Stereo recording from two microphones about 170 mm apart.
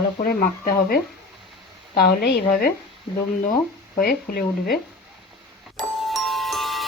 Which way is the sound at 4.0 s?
60° left (ahead or behind).